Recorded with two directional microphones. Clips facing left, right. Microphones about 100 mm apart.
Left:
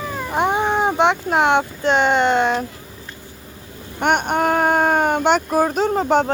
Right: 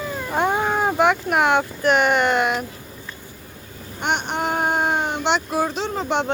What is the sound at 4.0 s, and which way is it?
Speech, 50° left (ahead or behind).